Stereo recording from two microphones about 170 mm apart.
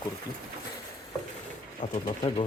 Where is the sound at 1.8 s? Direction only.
30° left (ahead or behind).